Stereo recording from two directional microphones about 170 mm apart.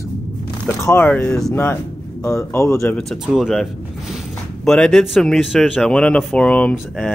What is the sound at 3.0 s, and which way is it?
Speech, centre (ahead or behind).